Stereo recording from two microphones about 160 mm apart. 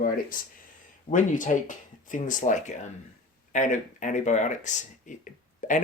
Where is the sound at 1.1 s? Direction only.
55° left (ahead or behind).